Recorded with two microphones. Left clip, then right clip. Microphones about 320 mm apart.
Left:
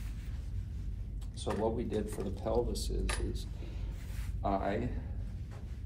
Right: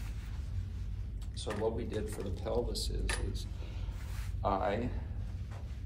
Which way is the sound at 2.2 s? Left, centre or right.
Centre.